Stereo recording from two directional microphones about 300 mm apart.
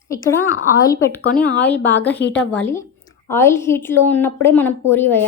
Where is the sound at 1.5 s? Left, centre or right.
Centre.